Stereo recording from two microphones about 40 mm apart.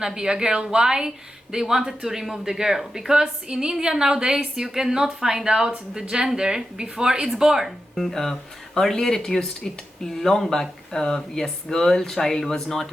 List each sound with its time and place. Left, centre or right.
0.0 s speech: centre
8.0 s speech: centre